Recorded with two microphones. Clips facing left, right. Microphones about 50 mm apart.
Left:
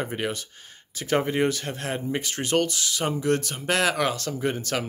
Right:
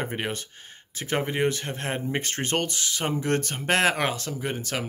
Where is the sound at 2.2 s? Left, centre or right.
Right.